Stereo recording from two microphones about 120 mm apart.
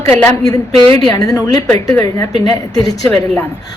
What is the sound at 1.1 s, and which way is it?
Speech, 30° left (ahead or behind).